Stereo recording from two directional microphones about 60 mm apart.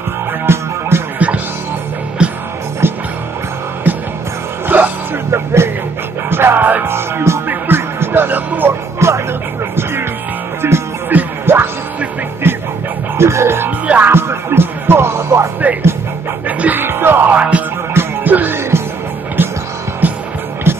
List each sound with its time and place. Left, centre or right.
0.5 s music: right
2.2 s music: centre
2.8 s music: right
3.9 s music: right
5.3 s music: right
6.9 s music: right
7.4 s music: right
9.0 s music: right
10.6 s music: right
11.1 s music: right
15.6 s music: right
16.8 s music: right
17.3 s music: right
20.0 s music: right